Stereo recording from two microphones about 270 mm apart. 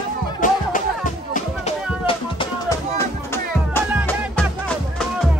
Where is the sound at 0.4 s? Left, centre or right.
Left.